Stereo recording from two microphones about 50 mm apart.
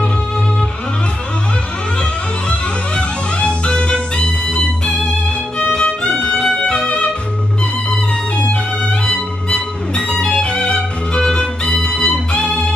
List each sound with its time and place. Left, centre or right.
2.5 s music: left
5.6 s violin: centre
9.0 s music: left